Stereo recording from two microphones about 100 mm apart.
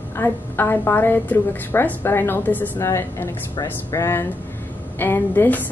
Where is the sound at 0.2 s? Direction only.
20° left (ahead or behind).